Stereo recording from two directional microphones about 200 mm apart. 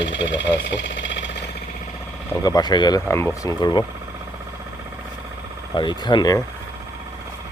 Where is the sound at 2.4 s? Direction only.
20° left (ahead or behind).